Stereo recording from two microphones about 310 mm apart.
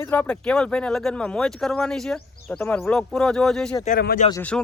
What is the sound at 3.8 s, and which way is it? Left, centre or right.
Speech, left.